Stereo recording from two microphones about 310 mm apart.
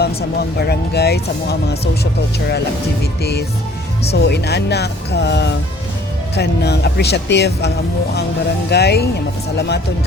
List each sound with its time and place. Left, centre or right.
0.0 s speech: left
4.1 s speech: left
8.7 s speech: left